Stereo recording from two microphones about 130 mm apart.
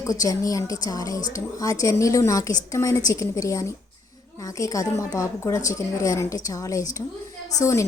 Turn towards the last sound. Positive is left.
turn(degrees=25)  # may be behind; listen again after turning